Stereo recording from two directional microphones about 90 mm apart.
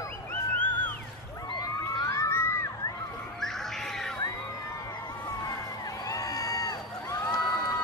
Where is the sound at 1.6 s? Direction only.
40° left (ahead or behind).